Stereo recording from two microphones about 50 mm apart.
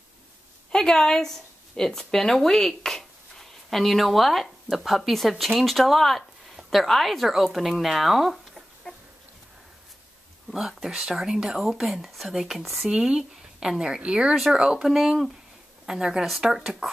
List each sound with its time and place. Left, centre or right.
0.7 s a woman's voice: centre
10.5 s speech: centre
12.8 s a woman's voice: centre